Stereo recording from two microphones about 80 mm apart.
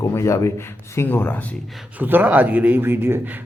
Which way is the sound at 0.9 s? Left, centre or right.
Left.